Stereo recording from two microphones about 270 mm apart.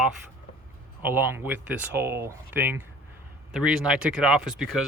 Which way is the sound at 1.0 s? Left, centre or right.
Centre.